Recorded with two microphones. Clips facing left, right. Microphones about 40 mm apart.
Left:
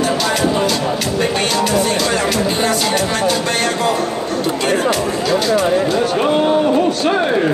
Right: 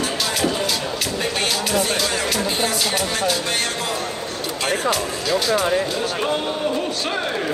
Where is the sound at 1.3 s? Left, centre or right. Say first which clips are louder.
Left 4 dB; centre.